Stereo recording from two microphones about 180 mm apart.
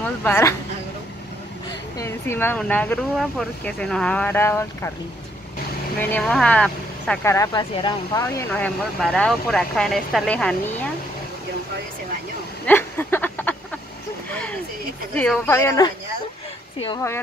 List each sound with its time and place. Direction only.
0.2 s speech: 15° left (ahead or behind)
2.0 s speech: 15° left (ahead or behind)
5.9 s speech: 10° left (ahead or behind)
7.3 s speech: 15° left (ahead or behind)
12.6 s a sound: 10° left (ahead or behind)
15.1 s speech: 10° left (ahead or behind)